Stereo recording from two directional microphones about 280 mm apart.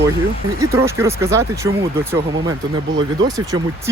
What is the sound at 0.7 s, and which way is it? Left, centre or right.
Speech, centre.